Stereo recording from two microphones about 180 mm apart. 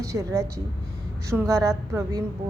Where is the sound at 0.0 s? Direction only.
15° right (ahead or behind).